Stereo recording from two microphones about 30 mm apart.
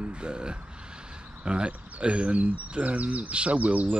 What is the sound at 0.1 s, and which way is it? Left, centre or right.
Speech, right.